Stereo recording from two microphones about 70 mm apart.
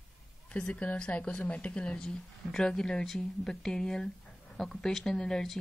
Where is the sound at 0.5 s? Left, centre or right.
Centre.